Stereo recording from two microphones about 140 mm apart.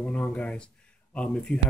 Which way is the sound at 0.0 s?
10° left (ahead or behind).